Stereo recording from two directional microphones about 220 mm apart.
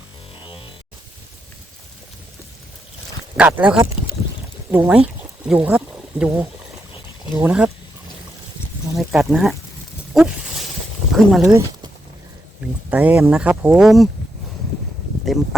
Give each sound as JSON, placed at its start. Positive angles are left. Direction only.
{"t": 0.4, "sound": "music", "side_deg": 25}
{"t": 3.3, "sound": "speech", "side_deg": -5}
{"t": 9.0, "sound": "speech", "side_deg": 0}
{"t": 11.1, "sound": "speech", "side_deg": 0}
{"t": 12.9, "sound": "speech", "side_deg": -5}